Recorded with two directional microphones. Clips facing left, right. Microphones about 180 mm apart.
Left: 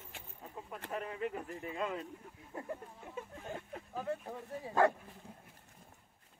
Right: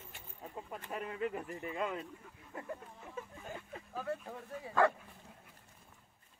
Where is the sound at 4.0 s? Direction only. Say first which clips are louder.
Left 1 dB; 20° left (ahead or behind).